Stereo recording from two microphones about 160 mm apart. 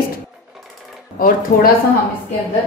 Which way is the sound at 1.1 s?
60° left (ahead or behind).